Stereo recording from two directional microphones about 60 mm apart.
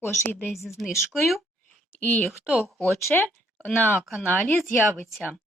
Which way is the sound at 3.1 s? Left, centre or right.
Left.